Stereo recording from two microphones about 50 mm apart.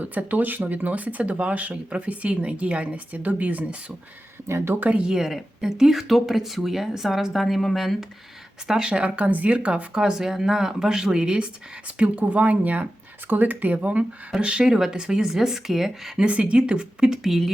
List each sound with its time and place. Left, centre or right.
0.0 s speech: right
4.4 s speech: right
4.8 s speech: right
5.0 s speech: centre
8.6 s speech: centre
8.9 s speech: right
9.9 s speech: centre
16.2 s speech: right; by 17.5 s centre